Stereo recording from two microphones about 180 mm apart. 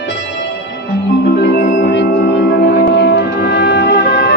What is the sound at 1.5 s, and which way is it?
Music, 60° left (ahead or behind).